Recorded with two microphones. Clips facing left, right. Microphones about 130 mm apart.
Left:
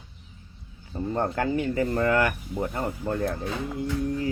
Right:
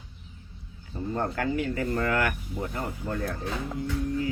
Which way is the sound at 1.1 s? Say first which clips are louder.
Left 3 dB; 30° left (ahead or behind).